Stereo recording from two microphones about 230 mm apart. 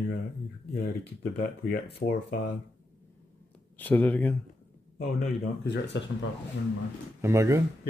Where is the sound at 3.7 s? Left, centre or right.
Centre.